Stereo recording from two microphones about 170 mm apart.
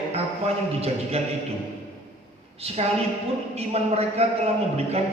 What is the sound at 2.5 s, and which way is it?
A man's voice, 40° right (ahead or behind).